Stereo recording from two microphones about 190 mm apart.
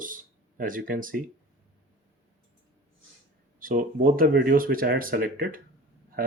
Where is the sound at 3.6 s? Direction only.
45° right (ahead or behind).